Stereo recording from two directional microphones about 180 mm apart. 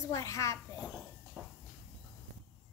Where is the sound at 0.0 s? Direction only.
15° left (ahead or behind).